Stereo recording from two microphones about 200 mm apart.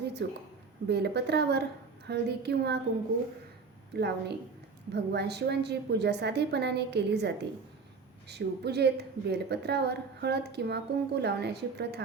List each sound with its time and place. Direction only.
0.0 s a sound: 55° right (ahead or behind)
0.9 s a woman's voice: 55° right (ahead or behind)
3.9 s a woman's voice: 55° right (ahead or behind)